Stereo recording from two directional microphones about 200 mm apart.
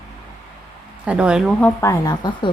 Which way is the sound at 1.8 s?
15° left (ahead or behind).